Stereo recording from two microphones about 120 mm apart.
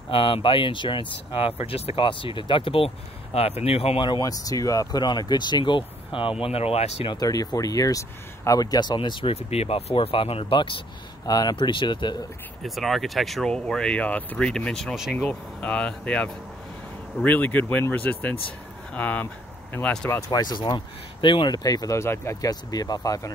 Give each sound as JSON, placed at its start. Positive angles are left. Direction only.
{"t": 0.1, "sound": "speech", "side_deg": 45}
{"t": 6.4, "sound": "speech", "side_deg": 55}
{"t": 7.1, "sound": "speech", "side_deg": 30}
{"t": 12.6, "sound": "speech", "side_deg": 0}
{"t": 15.1, "sound": "speech", "side_deg": 10}
{"t": 20.2, "sound": "speech", "side_deg": 35}